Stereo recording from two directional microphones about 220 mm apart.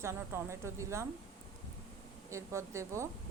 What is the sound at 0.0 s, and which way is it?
A woman's voice, 10° right (ahead or behind).